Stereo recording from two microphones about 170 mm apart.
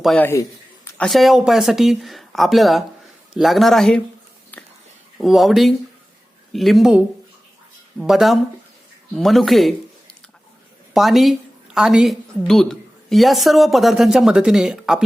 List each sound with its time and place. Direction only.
0.0 s a woman's voice: centre (ahead or behind)
4.5 s a sound: 10° left (ahead or behind)
5.1 s a woman's voice: centre (ahead or behind)